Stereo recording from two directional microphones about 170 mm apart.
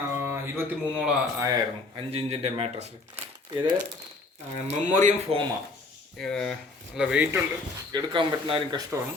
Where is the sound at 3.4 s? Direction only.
25° right (ahead or behind).